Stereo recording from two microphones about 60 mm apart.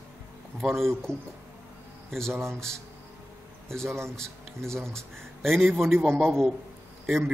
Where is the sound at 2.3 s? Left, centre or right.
Right.